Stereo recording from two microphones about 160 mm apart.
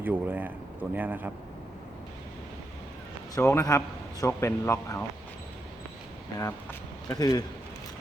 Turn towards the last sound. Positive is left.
turn(degrees=25)  # may be behind; listen again after turning